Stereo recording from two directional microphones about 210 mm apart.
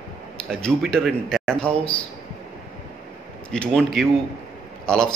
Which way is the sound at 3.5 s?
Centre (ahead or behind).